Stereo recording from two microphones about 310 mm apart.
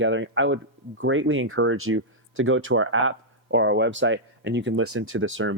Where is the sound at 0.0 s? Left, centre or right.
Right.